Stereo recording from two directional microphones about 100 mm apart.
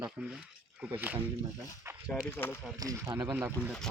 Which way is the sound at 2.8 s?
35° right (ahead or behind).